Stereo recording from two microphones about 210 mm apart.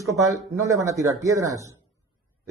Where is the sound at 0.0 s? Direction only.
15° right (ahead or behind).